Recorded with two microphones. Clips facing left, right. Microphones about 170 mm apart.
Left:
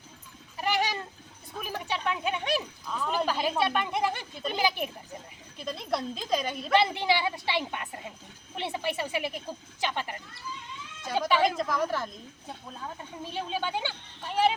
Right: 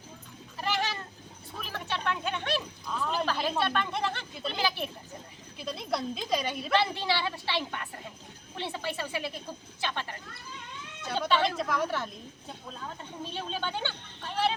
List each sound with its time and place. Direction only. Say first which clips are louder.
0.5 s goat: left 3 dB; 15° left (ahead or behind)
1.6 s a sound: left 2 dB; 15° left (ahead or behind)
3.2 s speech: left 2 dB; 10° left (ahead or behind)
5.5 s a woman's voice: left 1 dB; 5° right (ahead or behind)
6.7 s speech: left 4 dB; 15° left (ahead or behind)
11.2 s a woman's voice: left 2 dB; 10° left (ahead or behind)
13.2 s a woman's voice: left 3 dB; 10° left (ahead or behind)